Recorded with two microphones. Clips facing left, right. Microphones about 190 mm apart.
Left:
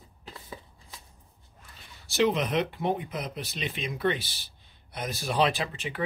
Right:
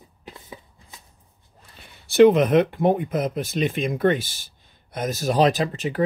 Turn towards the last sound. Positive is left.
turn(degrees=-40)  # may be behind; listen again after turning